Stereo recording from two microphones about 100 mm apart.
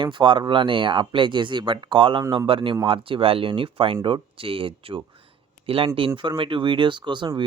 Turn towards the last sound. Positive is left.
turn(degrees=-50)  # may be behind; listen again after turning